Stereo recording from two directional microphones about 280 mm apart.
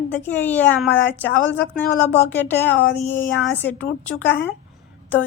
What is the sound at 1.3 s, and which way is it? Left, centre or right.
Speech, left.